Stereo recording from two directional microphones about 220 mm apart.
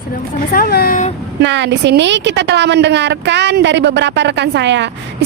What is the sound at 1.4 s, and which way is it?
A woman's voice, 55° right (ahead or behind).